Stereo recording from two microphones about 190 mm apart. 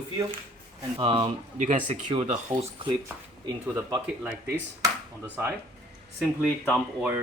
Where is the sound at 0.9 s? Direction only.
30° right (ahead or behind).